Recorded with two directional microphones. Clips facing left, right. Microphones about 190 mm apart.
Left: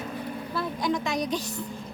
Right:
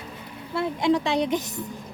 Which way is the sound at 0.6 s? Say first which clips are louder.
Right 6 dB; 30° right (ahead or behind).